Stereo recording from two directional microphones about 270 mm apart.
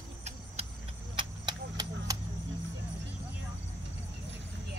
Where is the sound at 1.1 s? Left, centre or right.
Centre.